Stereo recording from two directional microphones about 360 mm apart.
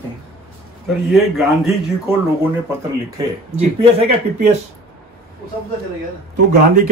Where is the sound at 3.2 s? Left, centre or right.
Centre.